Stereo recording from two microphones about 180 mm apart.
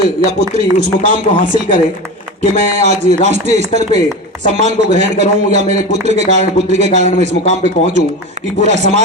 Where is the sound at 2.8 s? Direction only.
40° right (ahead or behind).